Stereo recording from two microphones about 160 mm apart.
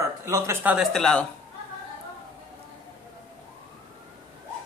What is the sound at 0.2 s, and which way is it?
Speech, 20° right (ahead or behind).